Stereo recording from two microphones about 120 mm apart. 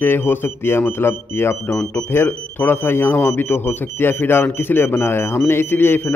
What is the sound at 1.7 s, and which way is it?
Speech, 10° left (ahead or behind).